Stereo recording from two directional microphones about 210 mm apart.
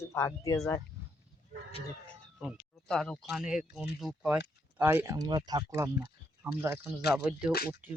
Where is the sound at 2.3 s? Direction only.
Centre (ahead or behind).